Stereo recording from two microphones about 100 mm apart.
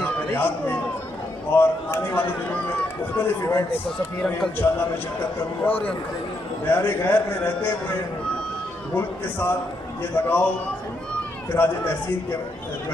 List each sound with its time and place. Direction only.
0.0 s a sound: 20° left (ahead or behind)
1.5 s a man's voice: 25° left (ahead or behind)
5.7 s a man's voice: 15° left (ahead or behind)
8.9 s a man's voice: 20° left (ahead or behind)
11.5 s a man's voice: 20° left (ahead or behind)